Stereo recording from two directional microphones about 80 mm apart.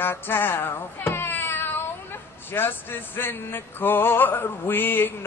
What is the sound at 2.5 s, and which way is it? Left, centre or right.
Male singing, left.